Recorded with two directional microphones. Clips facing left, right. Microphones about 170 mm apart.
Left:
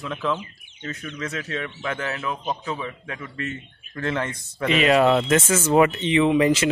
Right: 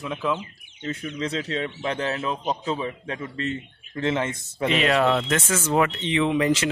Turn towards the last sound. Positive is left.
turn(degrees=5)  # may be behind; listen again after turning